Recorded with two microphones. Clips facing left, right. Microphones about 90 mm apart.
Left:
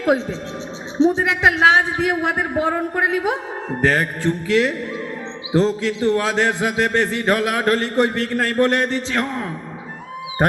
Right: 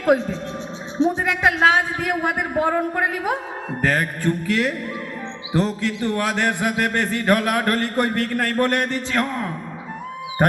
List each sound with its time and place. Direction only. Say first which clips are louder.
0.0 s a man's voice: even; 25° left (ahead or behind)
1.5 s a man's voice: left 2 dB; 25° left (ahead or behind)